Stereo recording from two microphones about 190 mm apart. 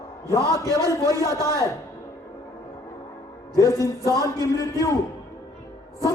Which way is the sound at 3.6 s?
15° left (ahead or behind).